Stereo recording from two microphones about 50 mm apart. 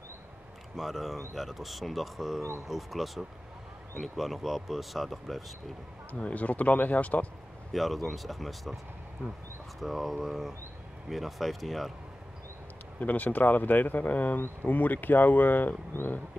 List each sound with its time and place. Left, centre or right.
0.7 s speech: centre
6.1 s speech: left
7.7 s speech: centre
9.8 s speech: centre
13.0 s speech: left